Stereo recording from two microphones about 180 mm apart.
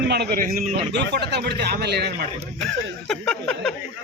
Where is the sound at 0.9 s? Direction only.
70° right (ahead or behind).